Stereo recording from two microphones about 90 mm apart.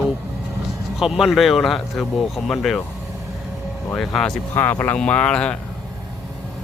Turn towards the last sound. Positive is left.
turn(degrees=10)  # may be behind; listen again after turning